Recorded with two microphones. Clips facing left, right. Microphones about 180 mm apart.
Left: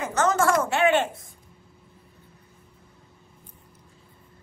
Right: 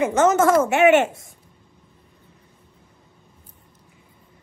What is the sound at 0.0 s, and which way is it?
A woman's voice, 20° right (ahead or behind).